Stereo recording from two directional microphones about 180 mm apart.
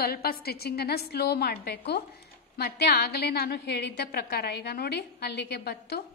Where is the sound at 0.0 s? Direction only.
60° left (ahead or behind).